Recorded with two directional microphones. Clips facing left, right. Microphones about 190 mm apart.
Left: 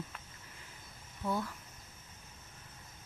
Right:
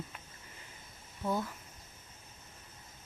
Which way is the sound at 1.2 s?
20° right (ahead or behind).